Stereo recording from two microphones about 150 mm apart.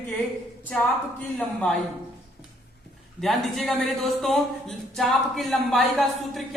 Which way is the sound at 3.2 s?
Centre (ahead or behind).